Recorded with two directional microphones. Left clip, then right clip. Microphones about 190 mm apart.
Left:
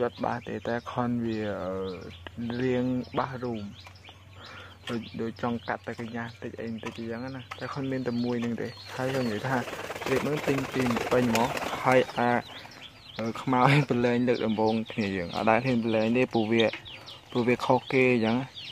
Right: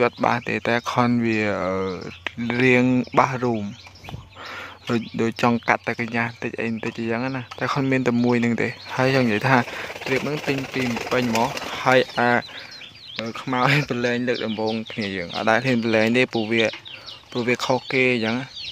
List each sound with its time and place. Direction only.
0.0 s speech: 20° right (ahead or behind)
5.1 s speech: 35° right (ahead or behind)
10.2 s speech: centre (ahead or behind)
13.2 s speech: centre (ahead or behind)
16.4 s speech: centre (ahead or behind)